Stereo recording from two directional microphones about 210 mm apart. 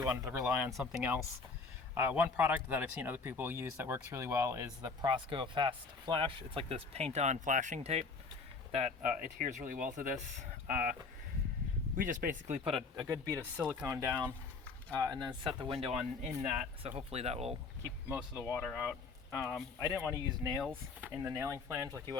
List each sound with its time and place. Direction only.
0.0 s speech: 15° right (ahead or behind); by 10.9 s 40° right (ahead or behind)
11.9 s speech: 40° right (ahead or behind)
13.0 s speech: 15° right (ahead or behind)
16.4 s speech: 10° right (ahead or behind)
17.1 s speech: 30° right (ahead or behind)
17.8 s speech: 10° right (ahead or behind)
18.4 s speech: 10° left (ahead or behind)
20.0 s speech: 15° right (ahead or behind)